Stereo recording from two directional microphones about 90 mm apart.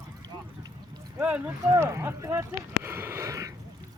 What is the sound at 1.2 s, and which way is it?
Speech, 15° right (ahead or behind).